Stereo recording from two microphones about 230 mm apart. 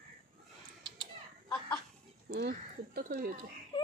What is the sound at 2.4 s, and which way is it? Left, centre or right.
Speech, right.